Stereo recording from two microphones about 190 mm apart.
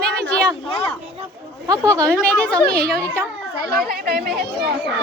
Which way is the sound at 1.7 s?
15° right (ahead or behind).